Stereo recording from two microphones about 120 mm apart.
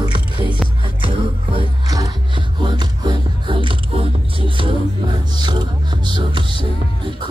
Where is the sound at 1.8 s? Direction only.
30° right (ahead or behind).